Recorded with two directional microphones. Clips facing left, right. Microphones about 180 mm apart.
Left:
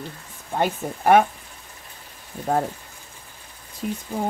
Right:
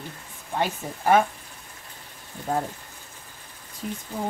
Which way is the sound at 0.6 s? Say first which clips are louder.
Left 4 dB; 60° left (ahead or behind).